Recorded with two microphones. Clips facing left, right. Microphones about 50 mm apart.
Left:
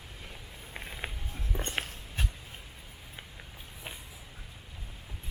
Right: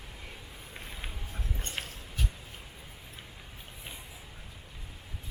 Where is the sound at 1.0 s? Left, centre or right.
Left.